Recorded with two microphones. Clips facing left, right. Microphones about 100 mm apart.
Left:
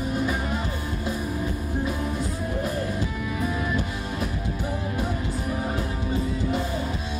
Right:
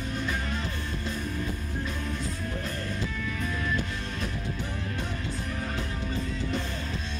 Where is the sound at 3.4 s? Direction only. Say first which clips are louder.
Left 4 dB; 15° left (ahead or behind).